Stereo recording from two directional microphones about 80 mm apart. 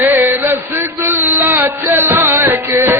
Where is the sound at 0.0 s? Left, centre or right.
Right.